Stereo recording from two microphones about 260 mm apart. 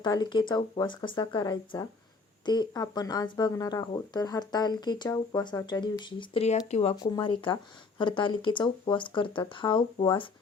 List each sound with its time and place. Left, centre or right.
0.0 s speech: centre